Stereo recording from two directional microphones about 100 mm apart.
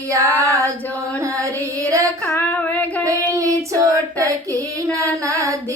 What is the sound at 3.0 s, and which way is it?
Child singing, 35° right (ahead or behind).